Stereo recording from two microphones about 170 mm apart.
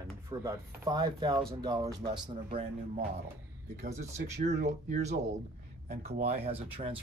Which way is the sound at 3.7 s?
45° right (ahead or behind).